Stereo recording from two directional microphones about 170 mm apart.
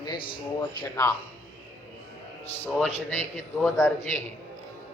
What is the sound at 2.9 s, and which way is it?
Speech, 40° left (ahead or behind).